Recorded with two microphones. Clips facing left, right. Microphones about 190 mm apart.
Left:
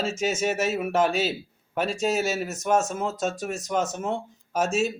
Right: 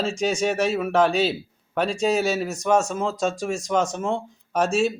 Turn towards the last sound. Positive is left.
turn(degrees=5)  # may be behind; listen again after turning